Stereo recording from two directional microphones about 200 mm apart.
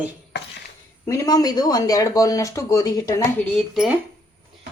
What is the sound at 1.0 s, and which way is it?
Speech, 15° left (ahead or behind).